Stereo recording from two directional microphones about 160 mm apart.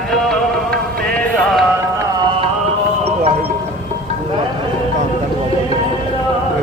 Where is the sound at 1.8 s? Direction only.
20° right (ahead or behind).